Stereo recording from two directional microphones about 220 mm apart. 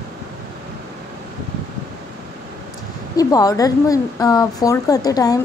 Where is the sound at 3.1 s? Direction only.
15° left (ahead or behind).